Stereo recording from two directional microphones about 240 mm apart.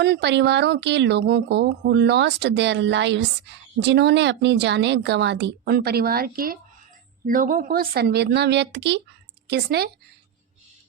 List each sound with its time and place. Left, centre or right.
0.0 s speech: right